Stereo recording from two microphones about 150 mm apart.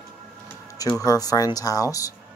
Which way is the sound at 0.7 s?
20° left (ahead or behind).